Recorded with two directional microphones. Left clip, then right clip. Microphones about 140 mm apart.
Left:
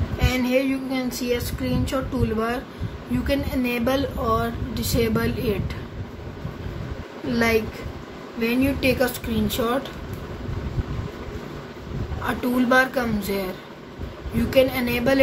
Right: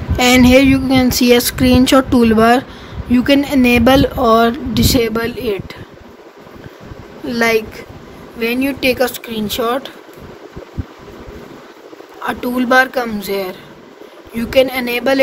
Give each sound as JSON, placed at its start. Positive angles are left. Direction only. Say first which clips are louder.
{"t": 0.2, "sound": "speech", "louder": "right 13 dB", "side_deg": -90}
{"t": 3.1, "sound": "speech", "louder": "right 12 dB", "side_deg": -60}
{"t": 7.2, "sound": "speech", "louder": "right 7 dB", "side_deg": -85}
{"t": 8.6, "sound": "speech", "louder": "right 7 dB", "side_deg": -90}
{"t": 12.2, "sound": "speech", "louder": "right 5 dB", "side_deg": -75}